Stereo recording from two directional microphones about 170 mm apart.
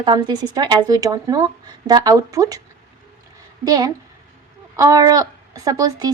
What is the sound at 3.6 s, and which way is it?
A woman's voice, 20° right (ahead or behind).